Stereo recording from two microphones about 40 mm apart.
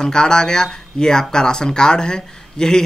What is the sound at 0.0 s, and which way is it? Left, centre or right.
Speech, centre.